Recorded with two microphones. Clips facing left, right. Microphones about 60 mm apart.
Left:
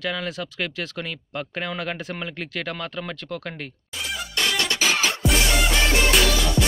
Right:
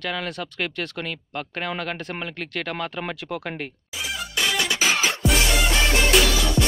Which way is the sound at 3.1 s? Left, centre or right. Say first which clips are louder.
Right 2 dB; centre.